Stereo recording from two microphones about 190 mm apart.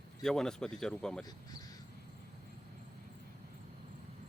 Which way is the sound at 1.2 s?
20° left (ahead or behind).